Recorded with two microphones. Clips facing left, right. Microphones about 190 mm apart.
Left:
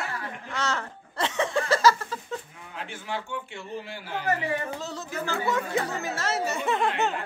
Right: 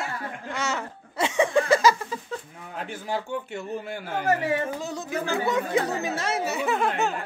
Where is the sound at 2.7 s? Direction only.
40° right (ahead or behind).